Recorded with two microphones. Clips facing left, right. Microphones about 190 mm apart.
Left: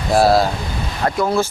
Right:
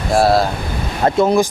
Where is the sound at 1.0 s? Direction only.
20° right (ahead or behind).